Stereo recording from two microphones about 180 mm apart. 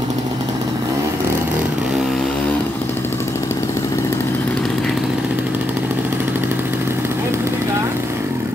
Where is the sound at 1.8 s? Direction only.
5° right (ahead or behind).